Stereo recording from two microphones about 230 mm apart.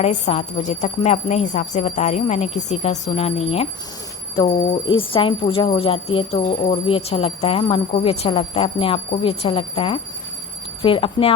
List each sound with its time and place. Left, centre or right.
0.0 s a woman's voice: left